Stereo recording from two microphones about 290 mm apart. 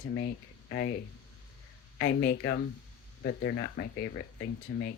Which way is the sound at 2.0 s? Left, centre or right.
Left.